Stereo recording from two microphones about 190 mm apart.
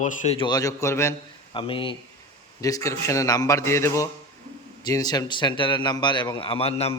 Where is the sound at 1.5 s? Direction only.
25° left (ahead or behind).